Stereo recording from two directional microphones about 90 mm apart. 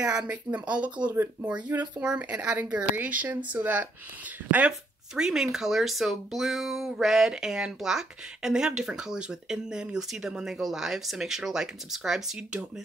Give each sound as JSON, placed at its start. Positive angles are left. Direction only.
{"t": 0.0, "sound": "speech", "side_deg": -10}